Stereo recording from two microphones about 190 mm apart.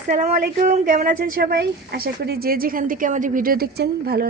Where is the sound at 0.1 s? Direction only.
40° right (ahead or behind).